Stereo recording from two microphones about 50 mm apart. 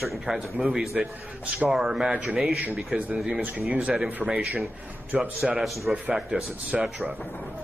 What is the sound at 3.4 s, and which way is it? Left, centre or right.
Speech, right.